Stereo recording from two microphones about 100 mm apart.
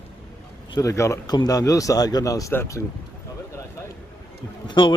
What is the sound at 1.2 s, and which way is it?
A man's voice, 40° left (ahead or behind).